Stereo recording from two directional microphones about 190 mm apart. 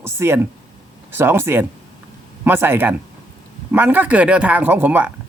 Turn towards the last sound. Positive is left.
turn(degrees=-10)  # may be behind; listen again after turning